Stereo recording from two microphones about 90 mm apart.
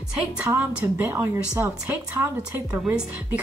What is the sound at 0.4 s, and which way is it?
Music, 20° right (ahead or behind).